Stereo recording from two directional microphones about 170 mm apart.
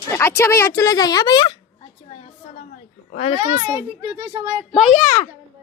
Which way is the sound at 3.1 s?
40° left (ahead or behind).